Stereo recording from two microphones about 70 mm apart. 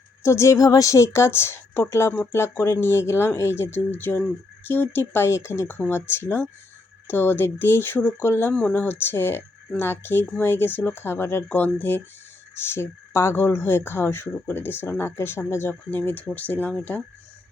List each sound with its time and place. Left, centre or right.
0.2 s speech: left
11.4 s speech: left
12.7 s speech: left
15.9 s speech: left